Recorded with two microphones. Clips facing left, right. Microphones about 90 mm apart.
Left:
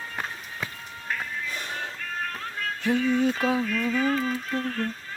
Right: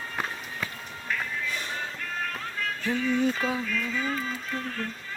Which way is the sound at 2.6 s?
40° left (ahead or behind).